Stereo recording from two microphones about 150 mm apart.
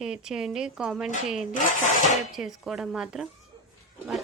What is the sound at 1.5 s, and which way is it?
Speech, 55° left (ahead or behind).